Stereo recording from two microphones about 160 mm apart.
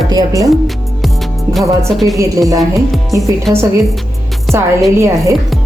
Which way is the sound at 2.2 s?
20° right (ahead or behind).